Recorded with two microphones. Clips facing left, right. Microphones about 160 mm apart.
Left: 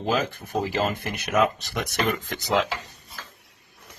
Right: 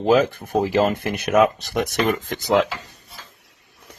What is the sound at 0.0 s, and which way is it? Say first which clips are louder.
Speech: right 8 dB; 55° right (ahead or behind).